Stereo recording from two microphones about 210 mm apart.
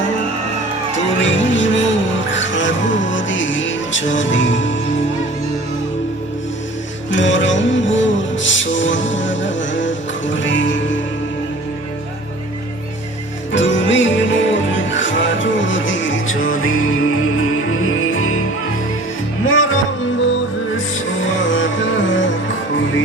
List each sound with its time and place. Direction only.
1.2 s music: 65° left (ahead or behind)
7.1 s music: 60° left (ahead or behind)
13.5 s music: 60° left (ahead or behind)
19.5 s music: 70° left (ahead or behind)